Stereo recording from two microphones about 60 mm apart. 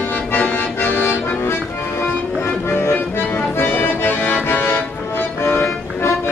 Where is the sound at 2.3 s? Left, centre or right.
Left.